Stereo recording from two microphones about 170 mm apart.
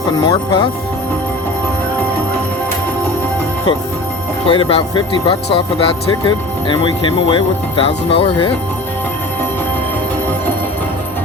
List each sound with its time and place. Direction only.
0.2 s speech: 30° left (ahead or behind)
4.4 s speech: 30° left (ahead or behind)